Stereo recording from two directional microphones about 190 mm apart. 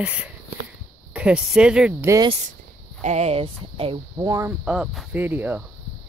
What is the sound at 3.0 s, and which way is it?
Speech, 35° right (ahead or behind).